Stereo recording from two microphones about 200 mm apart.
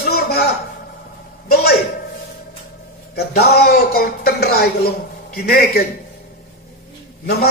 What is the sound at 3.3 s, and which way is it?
A man's voice, 50° left (ahead or behind).